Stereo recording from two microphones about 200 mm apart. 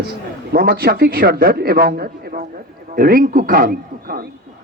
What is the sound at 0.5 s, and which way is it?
A man's voice, 50° right (ahead or behind).